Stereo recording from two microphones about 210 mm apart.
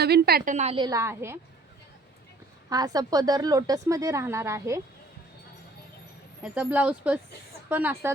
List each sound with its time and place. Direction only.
0.0 s a woman's voice: 50° right (ahead or behind); by 1.4 s 10° right (ahead or behind)
2.6 s a woman's voice: 15° right (ahead or behind)
6.4 s a woman's voice: 5° right (ahead or behind)